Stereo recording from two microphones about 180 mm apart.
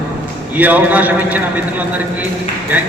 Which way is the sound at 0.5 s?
10° right (ahead or behind).